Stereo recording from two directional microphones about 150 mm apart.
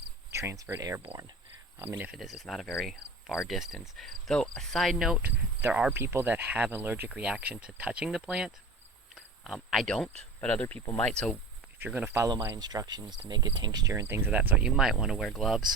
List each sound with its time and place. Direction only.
0.3 s speech: 20° right (ahead or behind)
1.8 s cricket: 15° right (ahead or behind)
5.6 s speech: 10° right (ahead or behind)
9.1 s cricket: centre (ahead or behind)
10.4 s speech: 10° left (ahead or behind)
11.8 s speech: 10° right (ahead or behind)
15.3 s cricket: centre (ahead or behind)